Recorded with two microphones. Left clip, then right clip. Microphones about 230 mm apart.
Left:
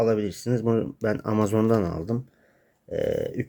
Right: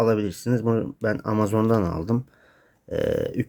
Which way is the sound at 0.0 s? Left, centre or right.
Centre.